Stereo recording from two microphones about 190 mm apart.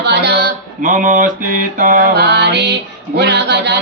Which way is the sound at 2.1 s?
60° right (ahead or behind).